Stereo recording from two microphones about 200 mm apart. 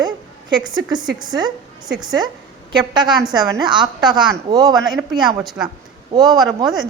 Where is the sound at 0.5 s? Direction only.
20° right (ahead or behind).